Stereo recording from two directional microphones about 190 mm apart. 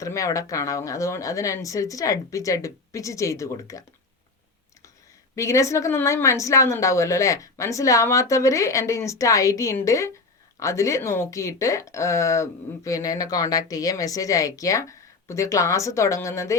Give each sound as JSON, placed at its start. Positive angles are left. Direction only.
{"t": 0.0, "sound": "speech", "side_deg": 15}
{"t": 5.3, "sound": "speech", "side_deg": 15}